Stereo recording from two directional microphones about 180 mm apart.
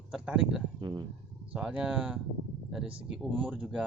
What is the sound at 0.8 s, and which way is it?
Speech, 25° right (ahead or behind).